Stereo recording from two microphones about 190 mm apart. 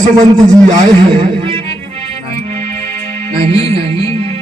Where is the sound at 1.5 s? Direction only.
30° right (ahead or behind).